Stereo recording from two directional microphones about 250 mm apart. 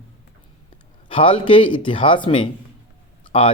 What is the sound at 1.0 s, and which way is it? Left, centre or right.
Speech, left.